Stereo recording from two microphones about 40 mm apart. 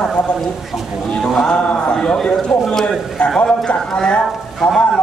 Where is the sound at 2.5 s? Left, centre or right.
Centre.